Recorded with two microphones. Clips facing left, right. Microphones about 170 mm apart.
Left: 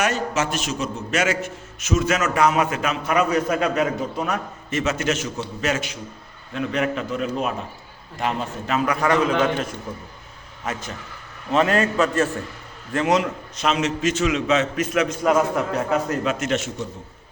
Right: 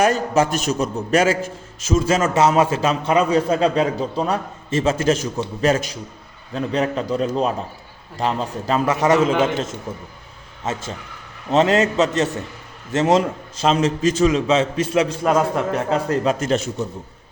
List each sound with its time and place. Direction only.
0.0 s a man's voice: 35° right (ahead or behind)
9.0 s a man's voice: 25° right (ahead or behind)